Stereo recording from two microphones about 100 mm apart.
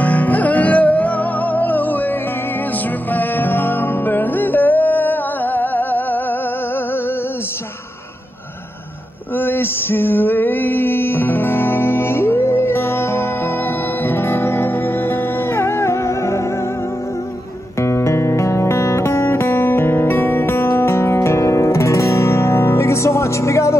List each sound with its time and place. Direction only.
0.0 s music: 15° left (ahead or behind)
9.4 s music: 20° left (ahead or behind)
17.7 s music: 30° left (ahead or behind)